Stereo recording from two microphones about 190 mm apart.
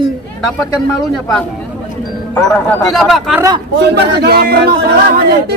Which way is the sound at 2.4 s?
5° left (ahead or behind).